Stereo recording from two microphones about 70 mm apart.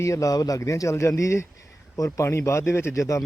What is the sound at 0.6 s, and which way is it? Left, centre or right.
Speech, left.